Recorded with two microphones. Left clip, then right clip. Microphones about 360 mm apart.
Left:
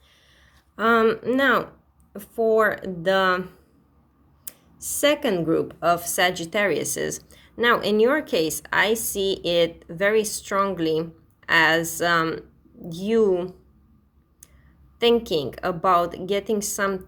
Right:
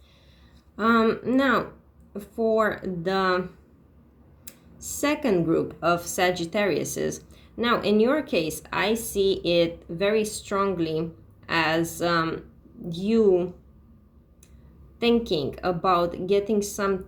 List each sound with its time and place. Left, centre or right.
0.8 s speech: left
4.9 s speech: left
6.8 s a sound: left
8.0 s speech: left
13.1 s speech: left
14.9 s speech: left